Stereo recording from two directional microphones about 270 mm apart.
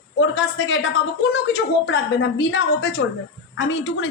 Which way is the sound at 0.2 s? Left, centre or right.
Left.